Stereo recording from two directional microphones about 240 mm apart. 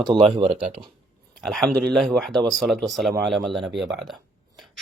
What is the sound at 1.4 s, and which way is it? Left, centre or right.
Speech, centre.